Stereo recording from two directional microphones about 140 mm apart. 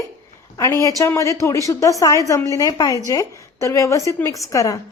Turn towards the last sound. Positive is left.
turn(degrees=25)  # may be behind; listen again after turning